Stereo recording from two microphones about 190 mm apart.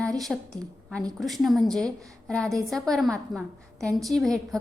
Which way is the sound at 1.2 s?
Centre (ahead or behind).